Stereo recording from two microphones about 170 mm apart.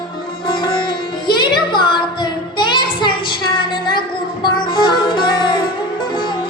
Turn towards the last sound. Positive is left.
turn(degrees=25)  # may be behind; listen again after turning